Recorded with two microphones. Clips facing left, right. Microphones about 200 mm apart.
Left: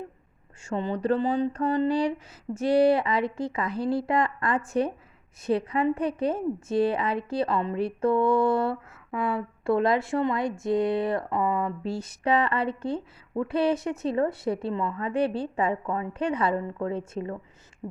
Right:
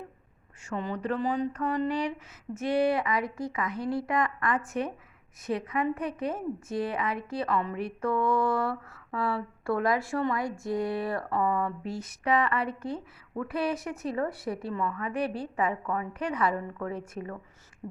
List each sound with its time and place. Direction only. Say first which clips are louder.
0.6 s a woman's voice: left 5 dB; 30° left (ahead or behind)